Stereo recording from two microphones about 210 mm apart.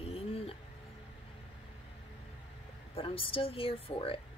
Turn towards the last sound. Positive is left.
turn(degrees=25)  # may be behind; listen again after turning